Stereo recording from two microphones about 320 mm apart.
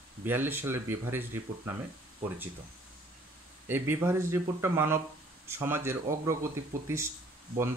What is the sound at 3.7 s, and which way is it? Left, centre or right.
Speech, centre.